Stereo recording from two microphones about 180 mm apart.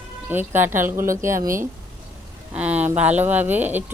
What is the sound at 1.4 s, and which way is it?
Speech, 50° right (ahead or behind).